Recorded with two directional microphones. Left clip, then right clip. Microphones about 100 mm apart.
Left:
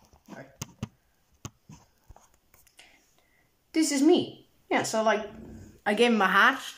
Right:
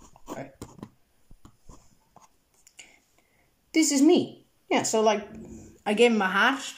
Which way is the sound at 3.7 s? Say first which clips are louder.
Right 2 dB; 25° right (ahead or behind).